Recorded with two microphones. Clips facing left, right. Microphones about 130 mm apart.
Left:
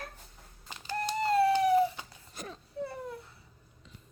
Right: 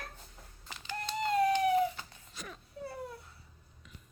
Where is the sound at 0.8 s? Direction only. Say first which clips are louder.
Left 4 dB; 40° left (ahead or behind).